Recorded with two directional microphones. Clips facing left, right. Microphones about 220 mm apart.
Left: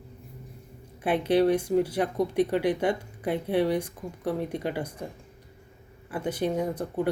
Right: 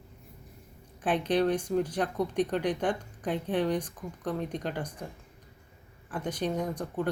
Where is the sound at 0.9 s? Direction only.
10° left (ahead or behind).